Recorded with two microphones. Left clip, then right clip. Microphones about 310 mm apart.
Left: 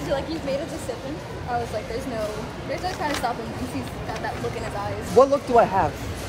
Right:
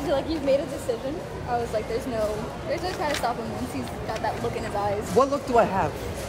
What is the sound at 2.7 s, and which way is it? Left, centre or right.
Speech, centre.